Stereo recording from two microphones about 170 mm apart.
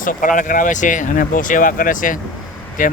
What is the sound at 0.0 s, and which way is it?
Speech, 50° left (ahead or behind).